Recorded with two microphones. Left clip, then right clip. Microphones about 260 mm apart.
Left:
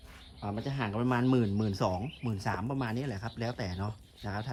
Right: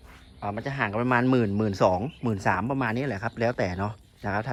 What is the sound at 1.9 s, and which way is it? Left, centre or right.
Speech, left.